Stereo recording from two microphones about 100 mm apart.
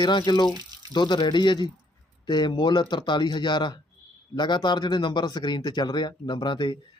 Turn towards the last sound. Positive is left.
turn(degrees=50)  # may be behind; listen again after turning